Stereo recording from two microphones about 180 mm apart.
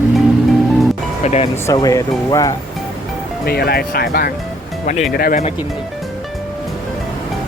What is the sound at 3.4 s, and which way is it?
Speech, 60° left (ahead or behind).